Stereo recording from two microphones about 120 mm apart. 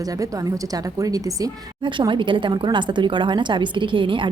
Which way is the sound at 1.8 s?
40° right (ahead or behind).